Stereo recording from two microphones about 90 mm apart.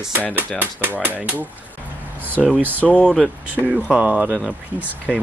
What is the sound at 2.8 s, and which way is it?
Speech, 10° left (ahead or behind).